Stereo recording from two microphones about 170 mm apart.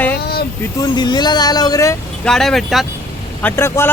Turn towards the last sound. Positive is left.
turn(degrees=15)  # may be behind; listen again after turning